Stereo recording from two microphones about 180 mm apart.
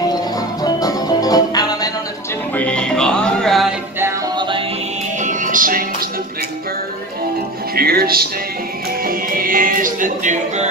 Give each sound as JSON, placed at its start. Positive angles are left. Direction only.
{"t": 0.7, "sound": "music", "side_deg": 20}
{"t": 2.5, "sound": "music", "side_deg": 5}
{"t": 4.4, "sound": "music", "side_deg": -25}
{"t": 5.2, "sound": "music", "side_deg": -45}
{"t": 7.7, "sound": "music", "side_deg": -55}